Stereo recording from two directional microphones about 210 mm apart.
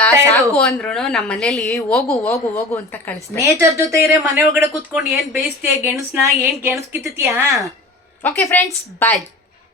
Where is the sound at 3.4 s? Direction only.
15° right (ahead or behind).